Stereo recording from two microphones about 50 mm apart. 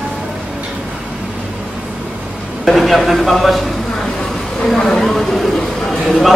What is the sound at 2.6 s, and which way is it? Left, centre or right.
A woman's voice, centre.